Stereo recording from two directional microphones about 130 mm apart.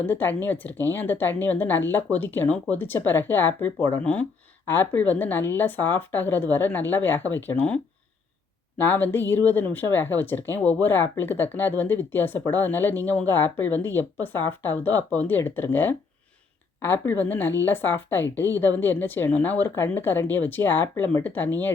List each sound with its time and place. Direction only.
0.0 s speech: 15° left (ahead or behind)
8.8 s speech: 15° left (ahead or behind)